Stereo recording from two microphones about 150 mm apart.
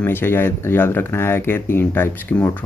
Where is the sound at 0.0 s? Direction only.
15° left (ahead or behind).